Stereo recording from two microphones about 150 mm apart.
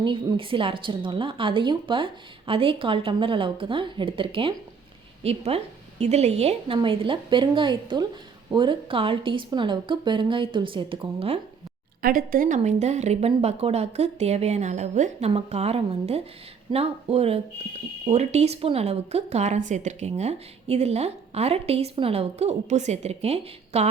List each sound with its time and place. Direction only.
0.0 s a woman's voice: 35° right (ahead or behind)
12.0 s a woman's voice: 65° right (ahead or behind); by 23.9 s 45° right (ahead or behind)